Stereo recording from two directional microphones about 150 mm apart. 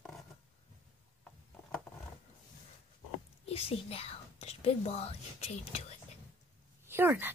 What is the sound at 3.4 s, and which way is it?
Speech, 40° left (ahead or behind).